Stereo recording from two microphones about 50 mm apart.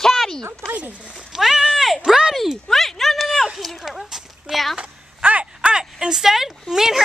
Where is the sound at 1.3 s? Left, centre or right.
Centre.